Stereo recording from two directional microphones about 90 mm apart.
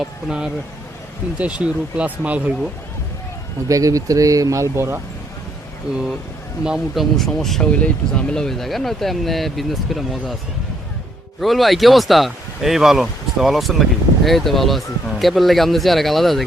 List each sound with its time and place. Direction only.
0.0 s speech: 10° right (ahead or behind)
3.7 s speech: 40° right (ahead or behind)
6.7 s speech: 5° right (ahead or behind)
11.3 s speech: centre (ahead or behind)